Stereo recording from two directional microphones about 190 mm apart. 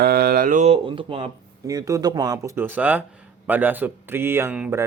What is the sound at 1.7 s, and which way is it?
Speech, 15° right (ahead or behind).